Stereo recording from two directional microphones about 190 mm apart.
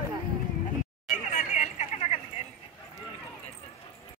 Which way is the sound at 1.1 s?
40° left (ahead or behind).